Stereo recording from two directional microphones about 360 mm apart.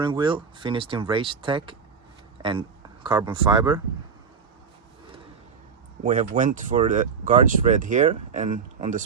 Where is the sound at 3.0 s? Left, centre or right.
Centre.